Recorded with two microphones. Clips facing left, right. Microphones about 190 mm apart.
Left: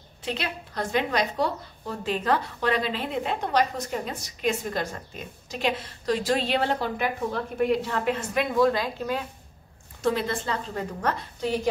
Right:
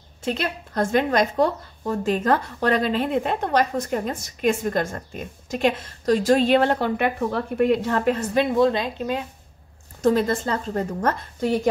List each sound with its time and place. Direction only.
0.2 s speech: 45° right (ahead or behind)
8.5 s a woman's voice: 25° right (ahead or behind)
10.0 s speech: 45° right (ahead or behind)